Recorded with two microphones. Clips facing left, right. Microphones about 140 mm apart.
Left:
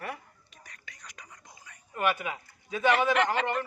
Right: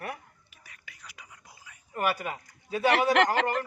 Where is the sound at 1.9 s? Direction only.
40° right (ahead or behind).